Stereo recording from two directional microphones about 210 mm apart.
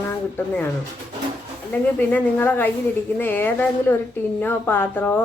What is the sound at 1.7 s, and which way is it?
A woman's voice, 10° left (ahead or behind).